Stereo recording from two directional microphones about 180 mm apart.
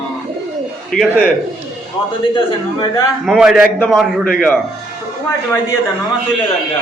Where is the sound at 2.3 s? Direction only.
20° left (ahead or behind).